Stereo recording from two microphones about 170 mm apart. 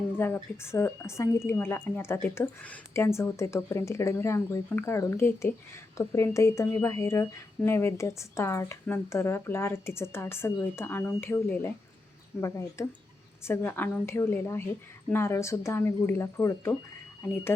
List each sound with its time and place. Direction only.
0.2 s speech: 15° left (ahead or behind)